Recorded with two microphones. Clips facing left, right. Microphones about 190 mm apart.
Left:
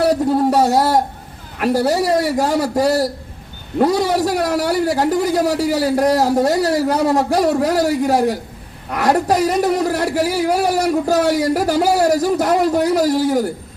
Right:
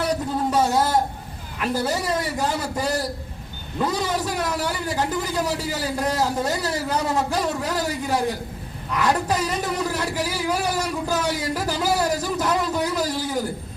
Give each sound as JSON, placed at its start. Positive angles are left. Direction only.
{"t": 0.0, "sound": "a sound", "side_deg": 65}
{"t": 0.5, "sound": "speech", "side_deg": 65}
{"t": 8.9, "sound": "a man's voice", "side_deg": 55}